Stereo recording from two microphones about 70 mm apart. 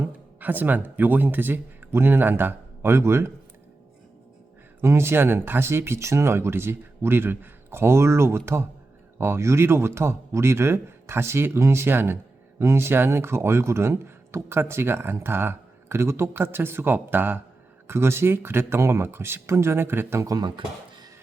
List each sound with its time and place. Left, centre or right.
0.0 s speech: right
4.8 s speech: right
20.2 s speech: right